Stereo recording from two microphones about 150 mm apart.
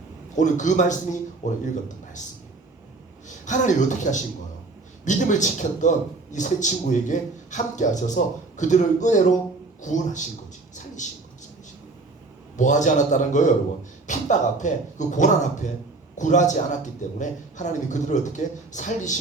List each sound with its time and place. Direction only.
0.3 s a man's voice: 55° left (ahead or behind)
3.4 s a man's voice: 55° left (ahead or behind)
10.8 s a sound: 55° left (ahead or behind)
12.5 s a man's voice: 55° left (ahead or behind)